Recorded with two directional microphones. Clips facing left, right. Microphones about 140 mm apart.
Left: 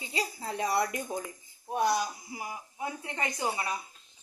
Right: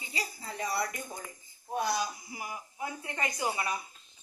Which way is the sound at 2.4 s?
25° left (ahead or behind).